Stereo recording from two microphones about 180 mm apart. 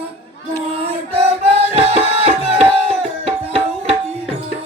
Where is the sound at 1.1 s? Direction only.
35° right (ahead or behind).